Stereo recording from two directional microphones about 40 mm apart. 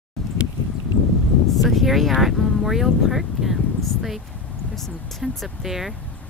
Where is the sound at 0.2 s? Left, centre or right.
Centre.